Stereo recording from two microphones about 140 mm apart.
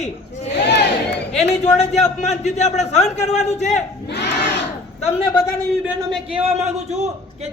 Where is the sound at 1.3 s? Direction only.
50° left (ahead or behind).